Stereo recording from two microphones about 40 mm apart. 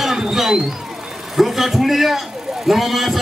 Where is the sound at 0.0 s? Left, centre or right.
Centre.